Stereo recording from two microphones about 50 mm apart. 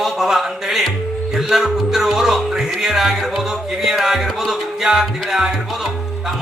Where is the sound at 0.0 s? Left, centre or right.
Centre.